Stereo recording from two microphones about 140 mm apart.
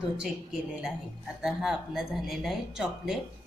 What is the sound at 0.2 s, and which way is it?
A woman's voice, 5° right (ahead or behind).